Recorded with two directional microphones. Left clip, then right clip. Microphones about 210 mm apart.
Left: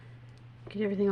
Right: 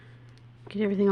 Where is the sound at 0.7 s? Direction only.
45° right (ahead or behind).